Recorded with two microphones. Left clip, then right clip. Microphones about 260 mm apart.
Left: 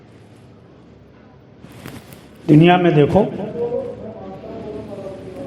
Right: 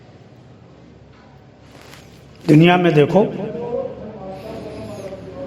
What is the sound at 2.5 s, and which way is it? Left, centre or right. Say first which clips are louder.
A man's voice: left 1 dB; right.